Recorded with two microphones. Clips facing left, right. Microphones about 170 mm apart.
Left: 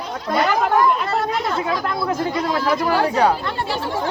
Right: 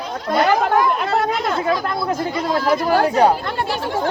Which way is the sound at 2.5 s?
45° right (ahead or behind).